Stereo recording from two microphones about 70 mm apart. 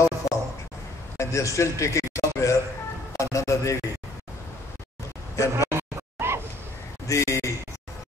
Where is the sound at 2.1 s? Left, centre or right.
Left.